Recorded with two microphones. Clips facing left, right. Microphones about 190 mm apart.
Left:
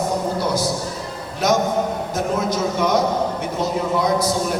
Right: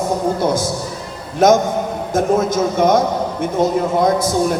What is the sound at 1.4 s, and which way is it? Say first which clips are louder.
Speech: right 5 dB; 50° right (ahead or behind).